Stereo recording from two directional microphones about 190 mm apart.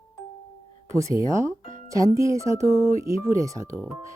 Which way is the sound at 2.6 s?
35° left (ahead or behind).